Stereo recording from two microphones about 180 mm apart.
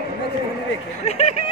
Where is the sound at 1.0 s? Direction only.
35° left (ahead or behind).